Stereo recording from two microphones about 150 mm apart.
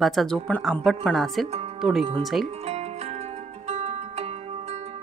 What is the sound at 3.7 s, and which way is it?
Music, 45° right (ahead or behind).